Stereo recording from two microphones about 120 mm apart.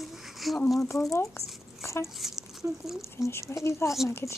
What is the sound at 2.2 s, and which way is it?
Speech, 5° right (ahead or behind).